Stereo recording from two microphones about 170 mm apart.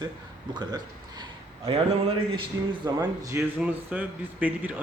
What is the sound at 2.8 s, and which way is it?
Speech, 20° right (ahead or behind).